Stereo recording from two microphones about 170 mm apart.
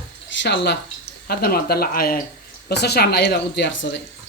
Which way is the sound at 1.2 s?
65° left (ahead or behind).